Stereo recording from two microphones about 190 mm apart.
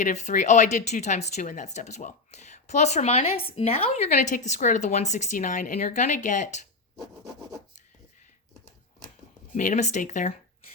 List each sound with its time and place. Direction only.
0.0 s speech: 40° left (ahead or behind)
9.6 s speech: 40° left (ahead or behind)